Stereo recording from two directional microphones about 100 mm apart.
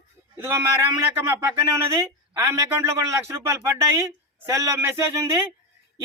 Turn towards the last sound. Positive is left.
turn(degrees=-30)  # may be behind; listen again after turning